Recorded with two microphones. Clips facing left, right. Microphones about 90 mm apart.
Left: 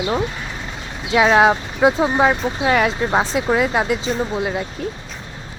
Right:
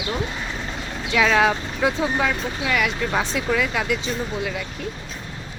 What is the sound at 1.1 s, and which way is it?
Speech, 25° left (ahead or behind).